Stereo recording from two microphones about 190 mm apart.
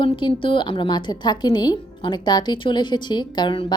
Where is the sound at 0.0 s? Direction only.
25° left (ahead or behind).